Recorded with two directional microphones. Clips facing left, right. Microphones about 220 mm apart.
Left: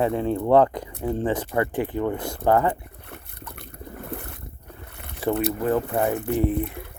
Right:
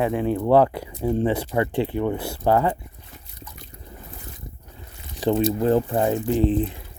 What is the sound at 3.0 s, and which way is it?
Boat, 60° left (ahead or behind).